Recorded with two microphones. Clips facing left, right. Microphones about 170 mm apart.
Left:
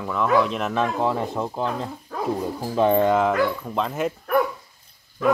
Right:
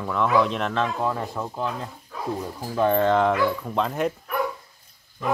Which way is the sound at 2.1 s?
55° left (ahead or behind).